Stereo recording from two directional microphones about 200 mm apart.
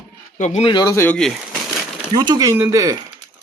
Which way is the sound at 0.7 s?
20° left (ahead or behind).